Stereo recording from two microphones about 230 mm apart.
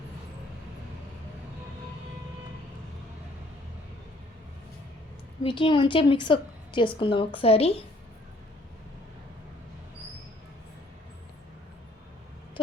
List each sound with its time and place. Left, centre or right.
5.4 s a woman's voice: left